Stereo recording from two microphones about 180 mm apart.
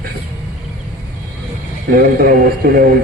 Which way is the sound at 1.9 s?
55° right (ahead or behind).